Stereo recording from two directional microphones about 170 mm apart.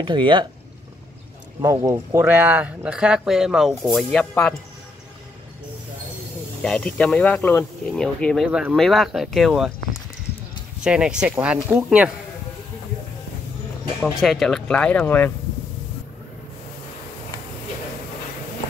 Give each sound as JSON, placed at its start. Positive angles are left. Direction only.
{"t": 0.0, "sound": "speech", "side_deg": -30}
{"t": 1.6, "sound": "speech", "side_deg": -20}
{"t": 6.6, "sound": "speech", "side_deg": 5}
{"t": 8.5, "sound": "speech", "side_deg": -5}
{"t": 10.8, "sound": "speech", "side_deg": -5}
{"t": 14.2, "sound": "speech", "side_deg": 0}